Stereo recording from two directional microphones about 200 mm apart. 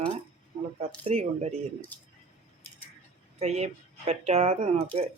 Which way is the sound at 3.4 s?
30° right (ahead or behind).